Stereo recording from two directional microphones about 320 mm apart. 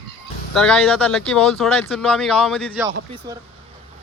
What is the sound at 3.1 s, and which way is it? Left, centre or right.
Speech, centre.